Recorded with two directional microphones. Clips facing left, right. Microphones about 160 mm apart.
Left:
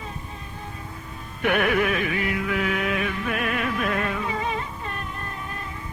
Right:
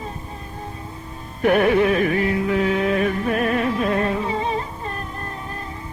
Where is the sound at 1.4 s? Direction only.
35° right (ahead or behind).